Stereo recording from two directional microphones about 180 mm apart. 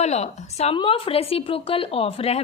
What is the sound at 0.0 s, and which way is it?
A woman's voice, 40° left (ahead or behind).